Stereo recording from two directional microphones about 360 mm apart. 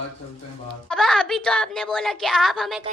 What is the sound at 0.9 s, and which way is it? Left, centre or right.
A woman's voice, centre.